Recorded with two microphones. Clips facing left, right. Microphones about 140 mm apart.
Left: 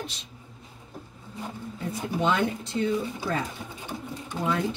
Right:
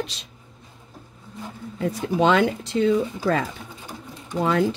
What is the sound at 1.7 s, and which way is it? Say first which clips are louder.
A woman's voice: right 8 dB; 90° right.